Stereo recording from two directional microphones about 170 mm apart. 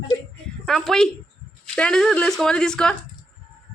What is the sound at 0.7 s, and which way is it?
Speech, centre (ahead or behind).